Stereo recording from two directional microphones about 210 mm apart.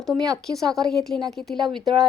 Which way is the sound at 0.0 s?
Centre (ahead or behind).